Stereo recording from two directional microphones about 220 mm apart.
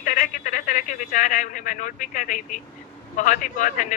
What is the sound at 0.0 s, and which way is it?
A man's voice, 35° left (ahead or behind).